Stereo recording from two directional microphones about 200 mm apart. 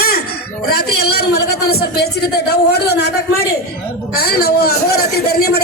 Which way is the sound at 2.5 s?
55° left (ahead or behind).